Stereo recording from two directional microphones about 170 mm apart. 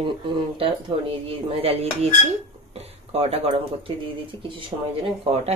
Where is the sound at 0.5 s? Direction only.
30° right (ahead or behind).